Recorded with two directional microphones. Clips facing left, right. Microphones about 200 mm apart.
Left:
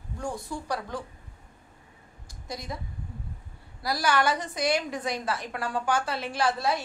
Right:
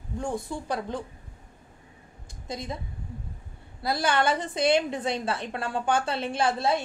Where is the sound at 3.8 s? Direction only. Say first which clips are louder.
Right 1 dB; 25° right (ahead or behind).